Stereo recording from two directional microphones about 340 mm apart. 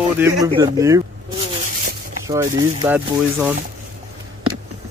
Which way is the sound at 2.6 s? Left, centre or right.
Centre.